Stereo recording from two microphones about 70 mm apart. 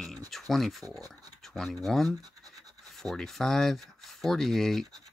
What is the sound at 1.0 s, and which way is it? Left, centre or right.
Speech, right.